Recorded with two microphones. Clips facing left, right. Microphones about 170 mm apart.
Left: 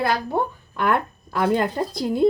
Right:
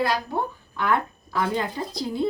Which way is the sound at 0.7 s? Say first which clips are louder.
Left 2 dB; 55° left (ahead or behind).